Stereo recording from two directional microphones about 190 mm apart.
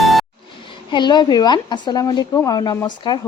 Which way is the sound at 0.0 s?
Centre (ahead or behind).